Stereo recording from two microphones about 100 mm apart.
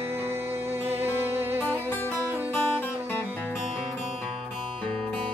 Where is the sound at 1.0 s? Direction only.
20° right (ahead or behind).